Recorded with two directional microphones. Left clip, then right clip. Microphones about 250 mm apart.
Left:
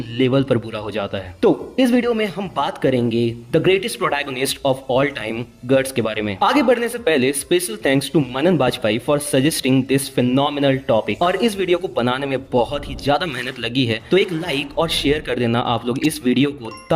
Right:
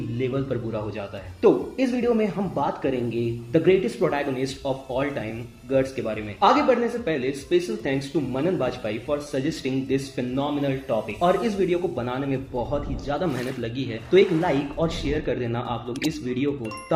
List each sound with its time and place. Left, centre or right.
0.2 s a man's voice: left
15.9 s speech: centre
16.2 s a man's voice: left